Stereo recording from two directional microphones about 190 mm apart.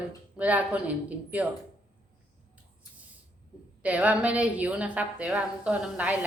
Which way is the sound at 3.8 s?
5° right (ahead or behind).